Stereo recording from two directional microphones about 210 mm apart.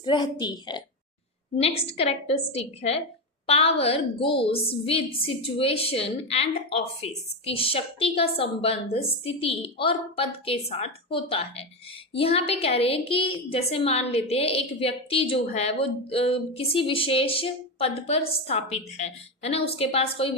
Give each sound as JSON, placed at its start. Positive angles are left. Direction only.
{"t": 0.0, "sound": "a woman's voice", "side_deg": 20}